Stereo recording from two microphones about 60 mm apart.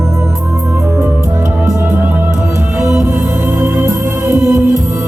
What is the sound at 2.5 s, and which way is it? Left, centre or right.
Music, right.